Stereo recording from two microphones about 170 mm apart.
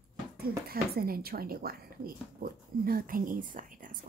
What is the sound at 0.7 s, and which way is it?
Speech, 60° right (ahead or behind).